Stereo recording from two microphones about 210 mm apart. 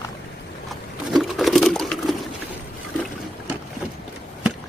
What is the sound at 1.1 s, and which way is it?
Sewing machine, centre (ahead or behind).